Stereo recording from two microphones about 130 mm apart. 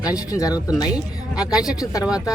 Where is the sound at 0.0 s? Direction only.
25° left (ahead or behind).